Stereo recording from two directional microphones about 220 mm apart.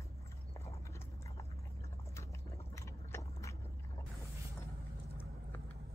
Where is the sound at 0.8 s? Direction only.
15° left (ahead or behind).